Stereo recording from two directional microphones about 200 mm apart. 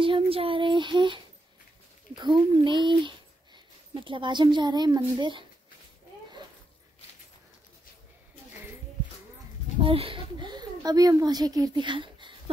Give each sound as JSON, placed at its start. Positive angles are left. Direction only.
{"t": 0.0, "sound": "child singing", "side_deg": -25}
{"t": 2.1, "sound": "speech", "side_deg": -20}
{"t": 9.8, "sound": "a child's voice", "side_deg": -25}